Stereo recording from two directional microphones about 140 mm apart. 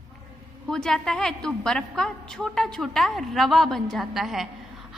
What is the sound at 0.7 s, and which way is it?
A woman's voice, 5° left (ahead or behind).